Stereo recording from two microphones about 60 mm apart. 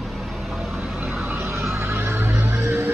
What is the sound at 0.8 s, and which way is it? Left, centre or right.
Vehicle, right.